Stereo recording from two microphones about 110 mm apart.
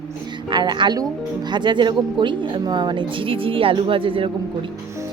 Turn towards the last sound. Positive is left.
turn(degrees=-55)  # may be behind; listen again after turning